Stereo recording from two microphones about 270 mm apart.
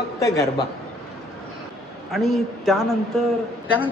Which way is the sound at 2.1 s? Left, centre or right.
Centre.